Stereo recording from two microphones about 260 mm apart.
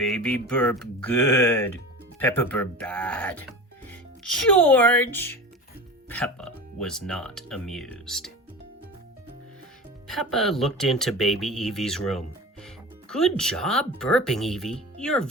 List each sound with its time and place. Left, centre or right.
0.0 s speech: centre
10.1 s speech: centre